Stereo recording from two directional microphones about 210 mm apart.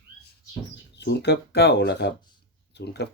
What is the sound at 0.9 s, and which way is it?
Speech, 55° left (ahead or behind).